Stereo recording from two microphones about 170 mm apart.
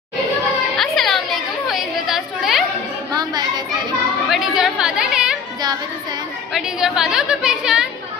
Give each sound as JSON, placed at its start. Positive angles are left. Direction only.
{"t": 0.7, "sound": "music", "side_deg": 0}
{"t": 1.7, "sound": "chatter", "side_deg": 0}
{"t": 3.1, "sound": "chatter", "side_deg": -25}
{"t": 4.3, "sound": "chatter", "side_deg": 0}
{"t": 6.5, "sound": "a woman's voice", "side_deg": -5}